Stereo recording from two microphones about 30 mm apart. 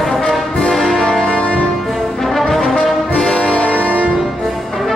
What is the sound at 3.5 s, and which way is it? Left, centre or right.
Music, left.